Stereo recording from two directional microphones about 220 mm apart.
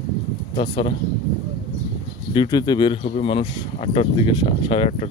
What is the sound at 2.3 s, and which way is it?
Speech, 20° left (ahead or behind).